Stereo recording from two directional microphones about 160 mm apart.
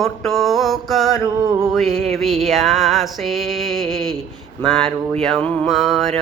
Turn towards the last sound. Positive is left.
turn(degrees=0)  # may be behind; listen again after turning